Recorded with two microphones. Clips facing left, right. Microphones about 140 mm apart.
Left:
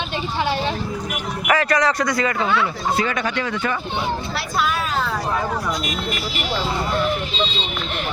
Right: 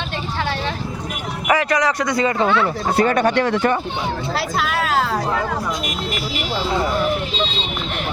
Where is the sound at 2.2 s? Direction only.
25° right (ahead or behind).